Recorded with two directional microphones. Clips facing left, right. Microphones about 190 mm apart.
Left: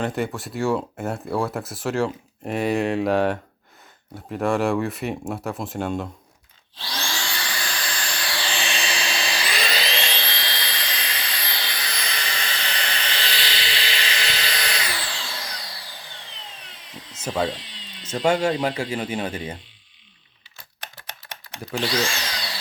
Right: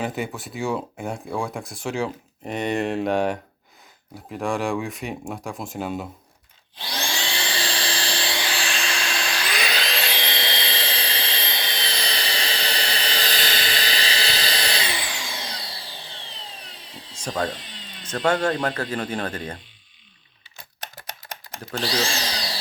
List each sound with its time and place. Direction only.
0.0 s speech: centre (ahead or behind)
6.7 s vacuum cleaner: 15° right (ahead or behind)
8.4 s vehicle: centre (ahead or behind)
10.2 s jet engine: 20° right (ahead or behind)
17.2 s speech: 5° left (ahead or behind)
17.5 s tools: 50° right (ahead or behind)
18.3 s speech: 10° left (ahead or behind)
21.8 s speech: 35° right (ahead or behind)